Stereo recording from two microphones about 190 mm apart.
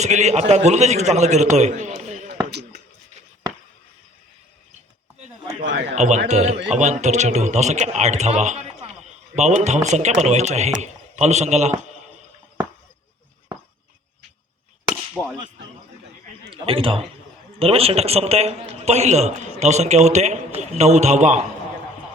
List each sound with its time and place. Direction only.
0.0 s a man's voice: 35° right (ahead or behind)
2.5 s a sound: 60° right (ahead or behind)
5.9 s a man's voice: 40° right (ahead or behind)
15.1 s whip: 10° left (ahead or behind)
16.5 s a man's voice: 30° right (ahead or behind)